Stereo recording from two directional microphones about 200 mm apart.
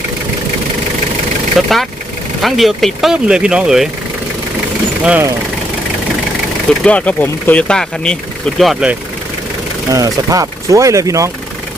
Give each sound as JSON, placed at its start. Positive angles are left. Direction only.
{"t": 1.5, "sound": "speech", "side_deg": 0}
{"t": 5.0, "sound": "speech", "side_deg": -10}
{"t": 6.8, "sound": "speech", "side_deg": 5}
{"t": 9.9, "sound": "speech", "side_deg": -15}